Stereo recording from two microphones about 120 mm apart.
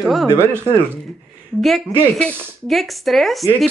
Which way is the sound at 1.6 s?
Centre (ahead or behind).